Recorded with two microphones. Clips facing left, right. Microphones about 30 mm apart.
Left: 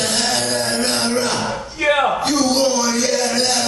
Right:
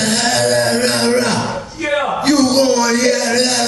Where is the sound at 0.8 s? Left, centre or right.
Right.